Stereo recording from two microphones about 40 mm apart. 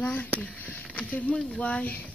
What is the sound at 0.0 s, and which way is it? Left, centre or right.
Speech, left.